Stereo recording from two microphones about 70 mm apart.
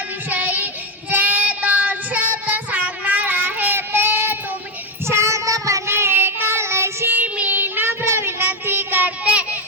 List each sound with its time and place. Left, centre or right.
0.3 s child singing: right
5.9 s child singing: right; by 9.6 s centre